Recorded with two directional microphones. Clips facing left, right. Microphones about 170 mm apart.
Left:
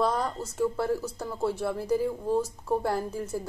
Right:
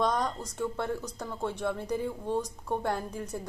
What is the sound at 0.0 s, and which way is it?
Speech, 5° left (ahead or behind).